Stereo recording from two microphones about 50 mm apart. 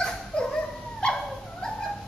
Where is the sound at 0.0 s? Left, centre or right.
Centre.